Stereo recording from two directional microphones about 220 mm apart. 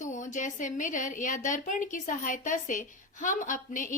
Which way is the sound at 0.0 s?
35° left (ahead or behind).